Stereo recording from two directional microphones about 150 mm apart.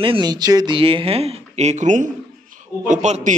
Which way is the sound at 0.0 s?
30° right (ahead or behind).